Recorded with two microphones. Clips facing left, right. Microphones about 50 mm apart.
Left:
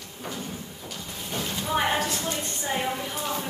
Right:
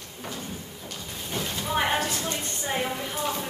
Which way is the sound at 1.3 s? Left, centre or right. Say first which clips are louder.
Left 1 dB; centre.